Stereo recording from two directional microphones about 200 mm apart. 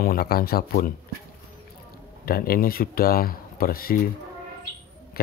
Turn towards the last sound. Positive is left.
turn(degrees=50)  # may be behind; listen again after turning